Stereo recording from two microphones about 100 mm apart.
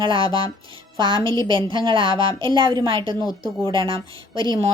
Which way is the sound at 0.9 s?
55° right (ahead or behind).